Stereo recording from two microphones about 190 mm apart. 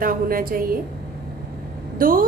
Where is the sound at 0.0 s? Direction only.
50° right (ahead or behind).